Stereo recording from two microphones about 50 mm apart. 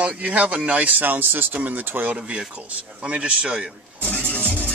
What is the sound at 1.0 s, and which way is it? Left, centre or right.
Speech, right.